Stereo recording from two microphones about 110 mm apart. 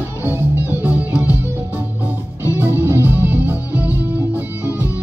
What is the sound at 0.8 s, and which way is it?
Music, 15° right (ahead or behind).